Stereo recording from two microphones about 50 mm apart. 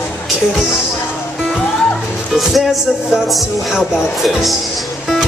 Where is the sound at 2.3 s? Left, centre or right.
Centre.